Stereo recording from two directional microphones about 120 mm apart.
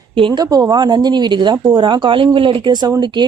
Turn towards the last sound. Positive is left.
turn(degrees=-35)  # may be behind; listen again after turning